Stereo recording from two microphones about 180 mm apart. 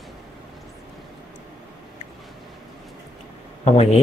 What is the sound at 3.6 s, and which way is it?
Speech, 35° left (ahead or behind).